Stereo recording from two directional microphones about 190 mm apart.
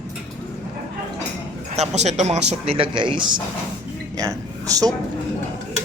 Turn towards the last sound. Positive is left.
turn(degrees=-20)  # may be behind; listen again after turning